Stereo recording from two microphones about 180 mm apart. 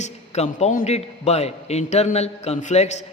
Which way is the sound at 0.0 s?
35° left (ahead or behind).